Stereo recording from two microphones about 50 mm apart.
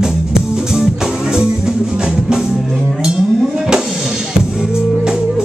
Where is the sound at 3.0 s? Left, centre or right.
Centre.